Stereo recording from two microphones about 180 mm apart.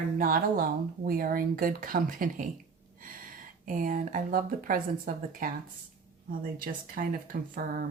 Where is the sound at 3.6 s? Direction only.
50° right (ahead or behind).